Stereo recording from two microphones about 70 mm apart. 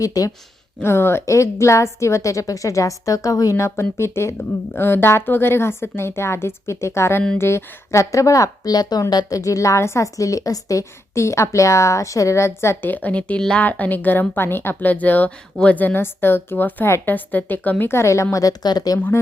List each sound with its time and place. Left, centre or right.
0.0 s a woman's voice: left
0.8 s a woman's voice: left
9.3 s a woman's voice: left
12.9 s speech: left
17.9 s a woman's voice: left